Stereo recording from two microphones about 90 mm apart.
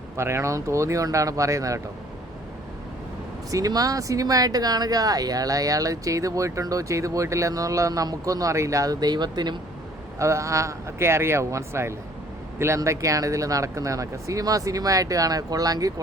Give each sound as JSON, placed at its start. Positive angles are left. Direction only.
{"t": 0.2, "sound": "speech", "side_deg": -30}
{"t": 3.5, "sound": "speech", "side_deg": -40}
{"t": 10.2, "sound": "speech", "side_deg": -35}